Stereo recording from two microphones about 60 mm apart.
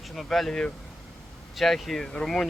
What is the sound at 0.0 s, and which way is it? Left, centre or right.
Speech, centre.